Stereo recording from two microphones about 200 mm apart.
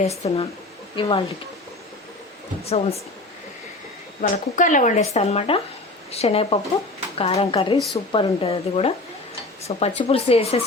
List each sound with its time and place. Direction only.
0.0 s speech: 30° left (ahead or behind)
2.6 s speech: 30° left (ahead or behind)
4.2 s speech: 40° left (ahead or behind)